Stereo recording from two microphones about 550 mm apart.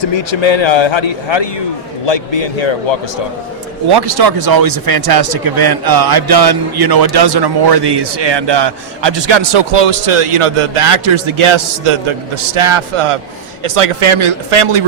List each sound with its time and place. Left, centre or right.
0.0 s a man's voice: left
3.9 s speech: right